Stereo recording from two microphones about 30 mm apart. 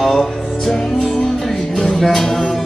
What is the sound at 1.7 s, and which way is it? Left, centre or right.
Music, left.